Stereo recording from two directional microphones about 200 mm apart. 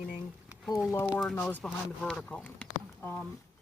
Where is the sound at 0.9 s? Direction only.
15° left (ahead or behind).